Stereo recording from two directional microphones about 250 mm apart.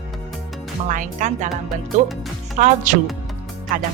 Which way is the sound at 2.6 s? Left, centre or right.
Right.